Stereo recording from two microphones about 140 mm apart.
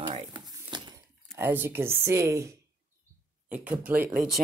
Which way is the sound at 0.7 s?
30° right (ahead or behind).